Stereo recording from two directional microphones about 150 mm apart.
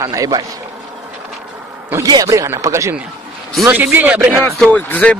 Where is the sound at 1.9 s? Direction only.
25° right (ahead or behind).